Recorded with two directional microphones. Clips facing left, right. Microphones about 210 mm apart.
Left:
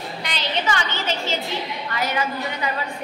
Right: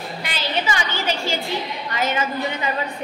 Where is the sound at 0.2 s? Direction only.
5° right (ahead or behind).